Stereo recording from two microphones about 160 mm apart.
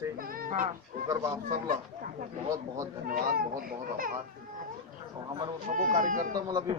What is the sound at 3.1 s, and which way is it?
Speech, 60° right (ahead or behind).